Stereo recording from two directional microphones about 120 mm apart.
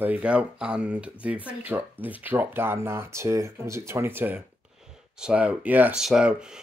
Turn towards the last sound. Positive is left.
turn(degrees=-5)  # may be behind; listen again after turning